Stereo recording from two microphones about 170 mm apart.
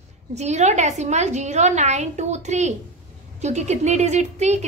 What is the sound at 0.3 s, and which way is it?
A woman's voice, 40° right (ahead or behind).